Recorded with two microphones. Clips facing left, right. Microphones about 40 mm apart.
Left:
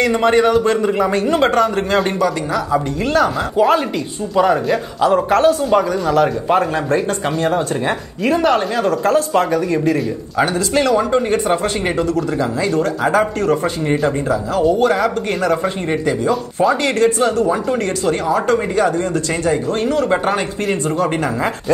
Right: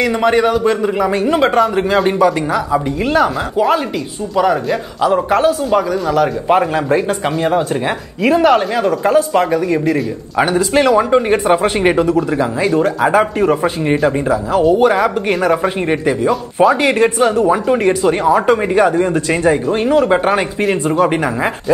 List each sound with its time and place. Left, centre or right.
0.0 s a man's voice: centre
3.5 s a man's voice: centre
6.5 s speech: centre
10.3 s speech: centre